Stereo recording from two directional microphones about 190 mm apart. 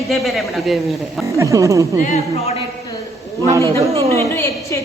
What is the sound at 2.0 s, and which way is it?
Speech, 35° left (ahead or behind).